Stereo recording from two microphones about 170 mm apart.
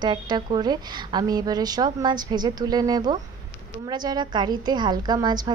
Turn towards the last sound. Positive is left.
turn(degrees=-25)  # may be behind; listen again after turning